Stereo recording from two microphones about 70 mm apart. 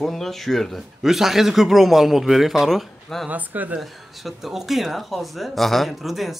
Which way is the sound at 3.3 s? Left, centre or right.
Right.